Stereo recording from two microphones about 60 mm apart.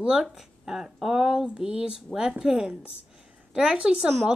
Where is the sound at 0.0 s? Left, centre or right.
Centre.